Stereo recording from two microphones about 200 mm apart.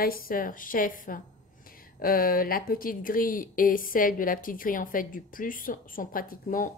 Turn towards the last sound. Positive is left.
turn(degrees=45)  # may be behind; listen again after turning